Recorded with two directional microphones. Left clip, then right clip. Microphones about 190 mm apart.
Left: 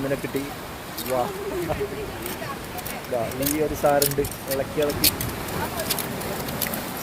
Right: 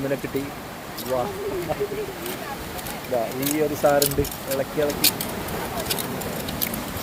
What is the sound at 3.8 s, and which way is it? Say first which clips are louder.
Speech: right 1 dB; centre (ahead or behind).